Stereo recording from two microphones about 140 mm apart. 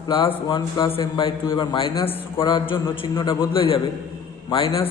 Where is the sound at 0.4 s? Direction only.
35° left (ahead or behind).